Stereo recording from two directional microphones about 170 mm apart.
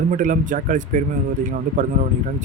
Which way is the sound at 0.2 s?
50° right (ahead or behind).